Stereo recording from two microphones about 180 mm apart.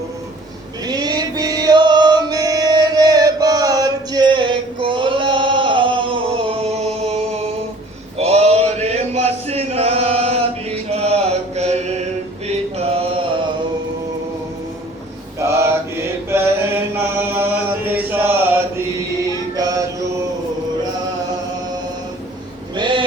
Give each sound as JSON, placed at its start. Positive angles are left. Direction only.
{"t": 0.9, "sound": "male singing", "side_deg": -20}
{"t": 8.2, "sound": "chant", "side_deg": -35}
{"t": 12.7, "sound": "mantra", "side_deg": -35}
{"t": 15.4, "sound": "mantra", "side_deg": -15}
{"t": 16.3, "sound": "a sound", "side_deg": -15}
{"t": 22.7, "sound": "vehicle", "side_deg": -25}